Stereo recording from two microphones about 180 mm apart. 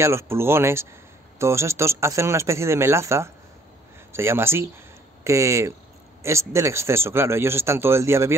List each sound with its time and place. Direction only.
0.0 s a man's voice: 15° right (ahead or behind)